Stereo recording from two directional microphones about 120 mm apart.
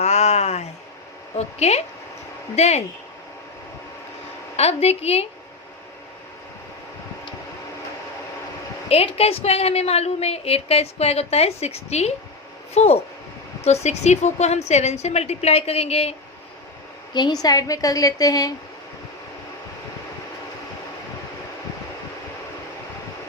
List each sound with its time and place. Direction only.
0.0 s a sound: 65° left (ahead or behind)
1.4 s a woman's voice: 65° left (ahead or behind)
4.5 s a woman's voice: 60° left (ahead or behind)
8.9 s a woman's voice: 55° left (ahead or behind)
17.4 s a woman's voice: 30° left (ahead or behind)